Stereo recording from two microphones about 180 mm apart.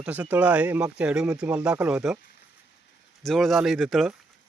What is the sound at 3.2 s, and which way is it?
Speech, centre (ahead or behind).